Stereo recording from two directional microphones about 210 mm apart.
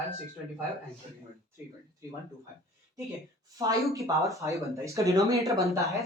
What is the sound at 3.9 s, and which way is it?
Speech, 15° right (ahead or behind).